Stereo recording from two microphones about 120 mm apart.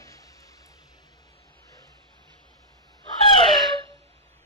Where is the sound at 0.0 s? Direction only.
30° left (ahead or behind).